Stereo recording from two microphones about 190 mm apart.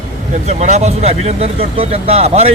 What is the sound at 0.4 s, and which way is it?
Speech, 35° right (ahead or behind).